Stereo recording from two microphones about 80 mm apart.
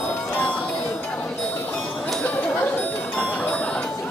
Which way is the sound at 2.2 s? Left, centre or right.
Centre.